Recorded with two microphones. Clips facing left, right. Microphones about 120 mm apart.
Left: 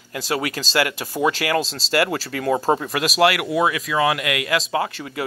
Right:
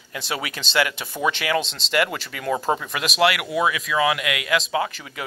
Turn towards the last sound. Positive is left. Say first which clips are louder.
# left 1 dB
turn(degrees=30)  # may be behind; listen again after turning